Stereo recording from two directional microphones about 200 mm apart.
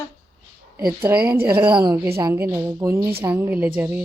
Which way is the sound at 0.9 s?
10° right (ahead or behind).